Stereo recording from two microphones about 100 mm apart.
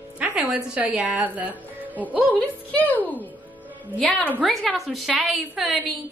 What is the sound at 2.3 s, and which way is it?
Speech, 15° left (ahead or behind).